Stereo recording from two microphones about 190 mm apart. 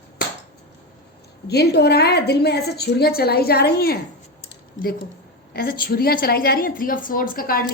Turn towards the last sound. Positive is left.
turn(degrees=50)  # may be behind; listen again after turning